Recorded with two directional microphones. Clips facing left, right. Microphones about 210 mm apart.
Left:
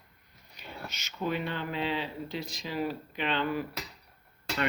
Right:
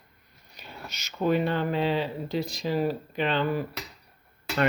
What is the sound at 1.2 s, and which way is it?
Speech, 45° right (ahead or behind).